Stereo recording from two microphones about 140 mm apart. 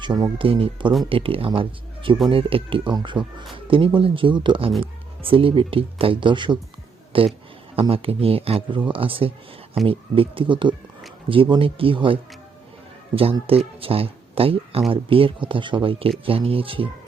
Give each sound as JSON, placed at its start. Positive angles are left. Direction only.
{"t": 0.0, "sound": "speech", "side_deg": -35}
{"t": 13.5, "sound": "speech", "side_deg": -45}